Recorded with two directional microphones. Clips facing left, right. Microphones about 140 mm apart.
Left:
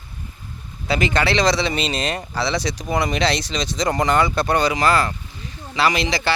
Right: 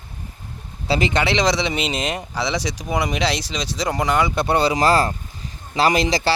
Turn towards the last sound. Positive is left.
turn(degrees=-40)  # may be behind; listen again after turning